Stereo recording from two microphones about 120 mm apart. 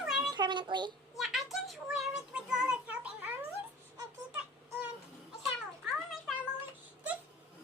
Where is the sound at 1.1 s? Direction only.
Centre (ahead or behind).